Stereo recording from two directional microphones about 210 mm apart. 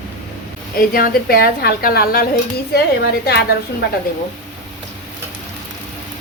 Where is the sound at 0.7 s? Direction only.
45° left (ahead or behind).